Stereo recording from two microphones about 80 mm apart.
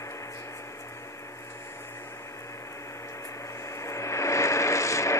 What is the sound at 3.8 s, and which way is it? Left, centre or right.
Vehicle, left.